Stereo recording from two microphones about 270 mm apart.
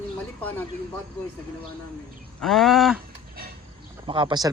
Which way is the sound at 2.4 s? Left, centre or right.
Centre.